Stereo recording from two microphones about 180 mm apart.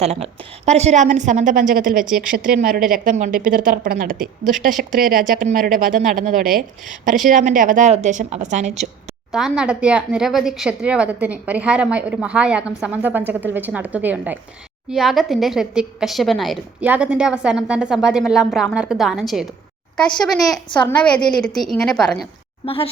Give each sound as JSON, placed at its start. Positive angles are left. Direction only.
{"t": 0.0, "sound": "a woman's voice", "side_deg": -35}
{"t": 2.0, "sound": "a woman's voice", "side_deg": -5}
{"t": 2.3, "sound": "a woman's voice", "side_deg": -50}
{"t": 9.3, "sound": "a woman's voice", "side_deg": -5}
{"t": 20.7, "sound": "a woman's voice", "side_deg": 5}
{"t": 22.6, "sound": "a woman's voice", "side_deg": 30}